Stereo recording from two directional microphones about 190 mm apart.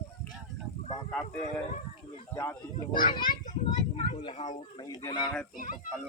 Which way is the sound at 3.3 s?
40° left (ahead or behind).